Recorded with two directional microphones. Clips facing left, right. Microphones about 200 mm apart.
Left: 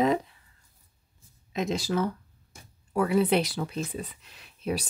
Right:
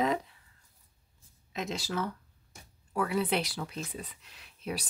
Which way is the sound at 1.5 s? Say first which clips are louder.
Left 7 dB; 15° left (ahead or behind).